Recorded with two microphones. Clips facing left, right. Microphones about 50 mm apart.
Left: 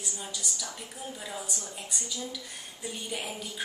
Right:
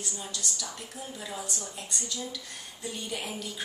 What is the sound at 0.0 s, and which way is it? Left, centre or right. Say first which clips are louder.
A woman's voice: right 1 dB; centre.